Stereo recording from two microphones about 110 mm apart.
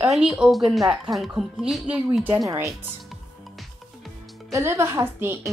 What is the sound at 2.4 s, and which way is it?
Speech, 25° right (ahead or behind).